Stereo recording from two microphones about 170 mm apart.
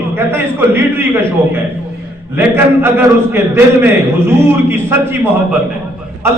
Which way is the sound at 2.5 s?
15° right (ahead or behind).